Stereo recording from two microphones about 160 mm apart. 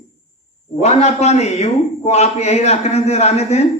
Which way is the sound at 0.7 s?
40° left (ahead or behind).